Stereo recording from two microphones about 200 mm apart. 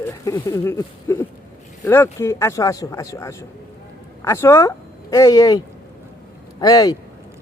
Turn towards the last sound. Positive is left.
turn(degrees=20)  # may be behind; listen again after turning